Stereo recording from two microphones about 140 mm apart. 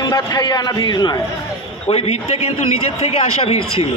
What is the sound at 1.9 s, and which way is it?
A man's voice, 50° left (ahead or behind).